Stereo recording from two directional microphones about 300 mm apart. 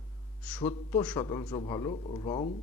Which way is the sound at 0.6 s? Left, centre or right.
Centre.